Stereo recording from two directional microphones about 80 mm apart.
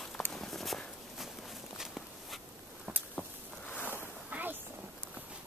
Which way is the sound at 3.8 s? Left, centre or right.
Right.